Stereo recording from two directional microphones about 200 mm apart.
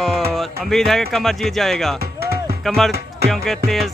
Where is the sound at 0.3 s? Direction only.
Centre (ahead or behind).